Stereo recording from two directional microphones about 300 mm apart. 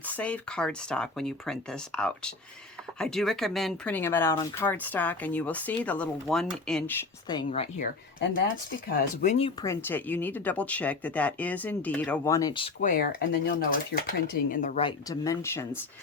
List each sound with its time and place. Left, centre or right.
0.0 s speech: centre
7.3 s speech: centre
9.2 s speech: left